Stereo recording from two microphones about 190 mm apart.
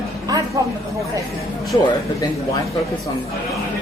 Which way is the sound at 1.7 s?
20° left (ahead or behind).